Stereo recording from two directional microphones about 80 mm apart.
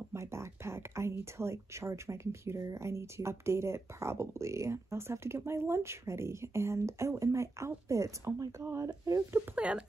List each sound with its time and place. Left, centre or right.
0.1 s speech: right
9.6 s speech: centre